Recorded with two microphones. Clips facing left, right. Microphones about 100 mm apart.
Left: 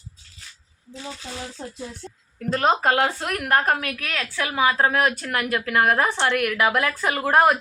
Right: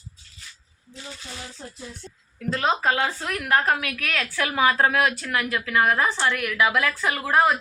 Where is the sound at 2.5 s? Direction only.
45° left (ahead or behind).